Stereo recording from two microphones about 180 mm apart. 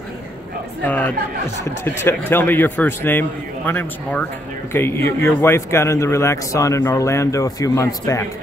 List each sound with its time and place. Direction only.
0.8 s a man's voice: 10° left (ahead or behind)